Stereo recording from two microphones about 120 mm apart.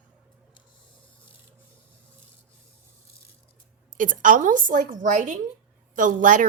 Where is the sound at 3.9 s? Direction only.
90° right.